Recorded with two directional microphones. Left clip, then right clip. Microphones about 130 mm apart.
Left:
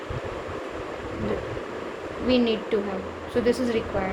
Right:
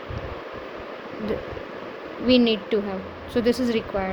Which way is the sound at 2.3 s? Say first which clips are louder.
Right 3 dB; 55° right (ahead or behind).